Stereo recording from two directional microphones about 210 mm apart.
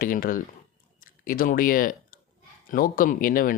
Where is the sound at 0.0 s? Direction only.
40° left (ahead or behind).